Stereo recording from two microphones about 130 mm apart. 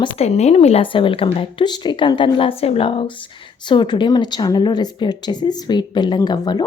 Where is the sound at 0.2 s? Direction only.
55° left (ahead or behind).